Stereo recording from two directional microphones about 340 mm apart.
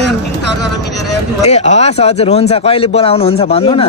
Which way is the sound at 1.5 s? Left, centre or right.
Centre.